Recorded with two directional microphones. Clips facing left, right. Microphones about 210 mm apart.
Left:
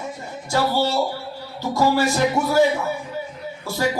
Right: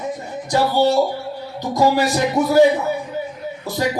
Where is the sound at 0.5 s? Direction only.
15° right (ahead or behind).